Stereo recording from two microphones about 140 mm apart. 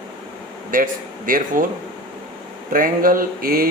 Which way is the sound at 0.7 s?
80° right.